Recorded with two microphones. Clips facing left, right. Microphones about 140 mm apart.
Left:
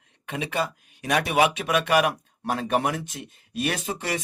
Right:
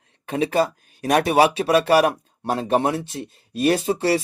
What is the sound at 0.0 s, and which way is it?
Speech, 35° right (ahead or behind).